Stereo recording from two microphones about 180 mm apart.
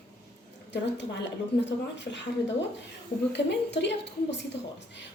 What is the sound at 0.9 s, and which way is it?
Speech, 75° left (ahead or behind).